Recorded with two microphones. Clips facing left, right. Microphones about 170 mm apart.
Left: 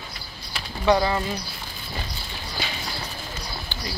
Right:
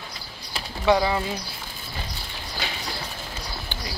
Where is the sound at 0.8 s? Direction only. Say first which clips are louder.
Even; 10° right (ahead or behind).